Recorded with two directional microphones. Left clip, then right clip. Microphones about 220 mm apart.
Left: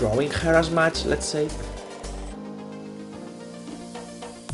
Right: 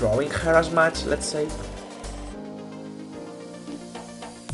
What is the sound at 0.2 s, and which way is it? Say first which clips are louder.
Speech: even; 20° left (ahead or behind).